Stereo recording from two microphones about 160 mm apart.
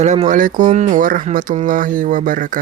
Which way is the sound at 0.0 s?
45° right (ahead or behind).